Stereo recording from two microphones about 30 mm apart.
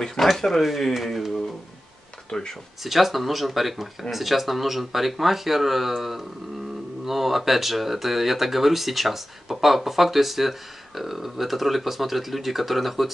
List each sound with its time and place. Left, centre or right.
0.0 s speech: centre
0.6 s speech: centre
2.3 s speech: centre
2.8 s speech: centre